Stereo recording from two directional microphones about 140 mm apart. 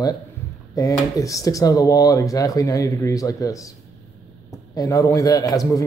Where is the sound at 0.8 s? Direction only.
25° left (ahead or behind).